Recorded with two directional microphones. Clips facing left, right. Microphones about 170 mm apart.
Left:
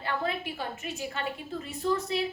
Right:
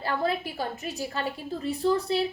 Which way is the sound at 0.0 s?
35° right (ahead or behind).